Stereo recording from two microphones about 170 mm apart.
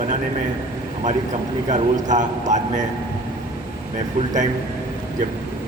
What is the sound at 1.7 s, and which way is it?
Speech, 45° right (ahead or behind).